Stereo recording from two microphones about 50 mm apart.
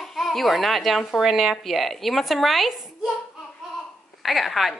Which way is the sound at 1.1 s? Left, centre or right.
Centre.